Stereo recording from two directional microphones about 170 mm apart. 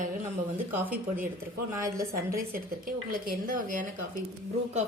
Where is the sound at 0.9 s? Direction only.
50° right (ahead or behind).